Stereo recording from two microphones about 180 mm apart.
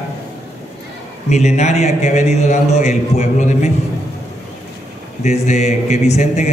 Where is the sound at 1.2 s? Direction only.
40° left (ahead or behind).